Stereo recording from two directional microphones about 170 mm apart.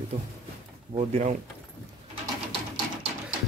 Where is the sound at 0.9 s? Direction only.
40° right (ahead or behind).